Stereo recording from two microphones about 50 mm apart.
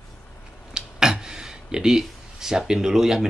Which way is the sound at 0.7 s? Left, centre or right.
Centre.